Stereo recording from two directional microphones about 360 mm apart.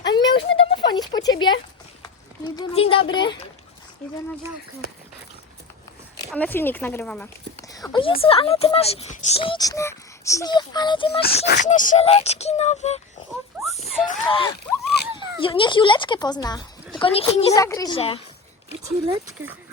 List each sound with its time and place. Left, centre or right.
0.0 s a sound: centre
2.0 s speech: centre
6.1 s speech: centre
11.2 s speech: left
14.1 s speech: centre
18.9 s speech: centre